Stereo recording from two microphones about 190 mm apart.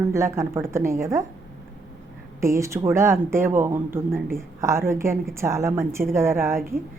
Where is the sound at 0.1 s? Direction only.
15° right (ahead or behind).